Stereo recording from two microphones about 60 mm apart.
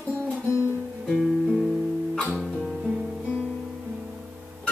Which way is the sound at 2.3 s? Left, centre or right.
Centre.